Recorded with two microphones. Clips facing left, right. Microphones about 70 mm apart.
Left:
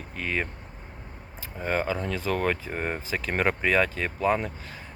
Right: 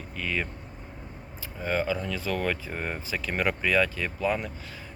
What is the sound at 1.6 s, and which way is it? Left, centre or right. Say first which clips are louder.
Speech: left 1 dB; left.